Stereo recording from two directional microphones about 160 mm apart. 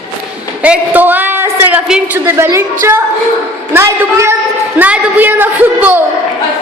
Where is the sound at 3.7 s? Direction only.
15° right (ahead or behind).